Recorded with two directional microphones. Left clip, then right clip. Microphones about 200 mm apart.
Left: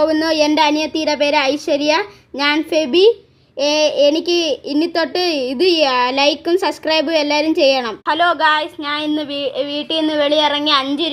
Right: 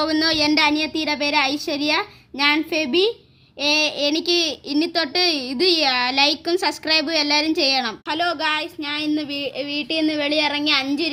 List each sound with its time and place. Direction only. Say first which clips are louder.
0.1 s a child's voice: left 4 dB; 15° right (ahead or behind)